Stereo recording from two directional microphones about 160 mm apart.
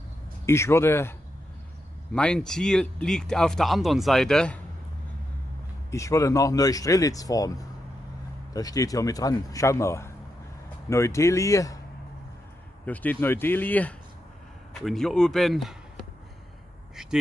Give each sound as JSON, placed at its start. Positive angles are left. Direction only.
{"t": 0.5, "sound": "speech", "side_deg": 15}
{"t": 2.1, "sound": "speech", "side_deg": 5}
{"t": 5.9, "sound": "speech", "side_deg": 20}
{"t": 12.8, "sound": "speech", "side_deg": 10}
{"t": 16.9, "sound": "speech", "side_deg": -5}